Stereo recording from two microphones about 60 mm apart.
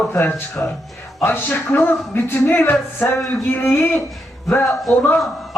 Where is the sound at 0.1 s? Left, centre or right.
Left.